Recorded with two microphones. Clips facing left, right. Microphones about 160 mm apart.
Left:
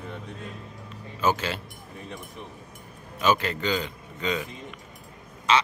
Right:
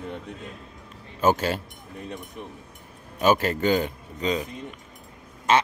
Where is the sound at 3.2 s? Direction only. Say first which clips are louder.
Right 3 dB; 45° right (ahead or behind).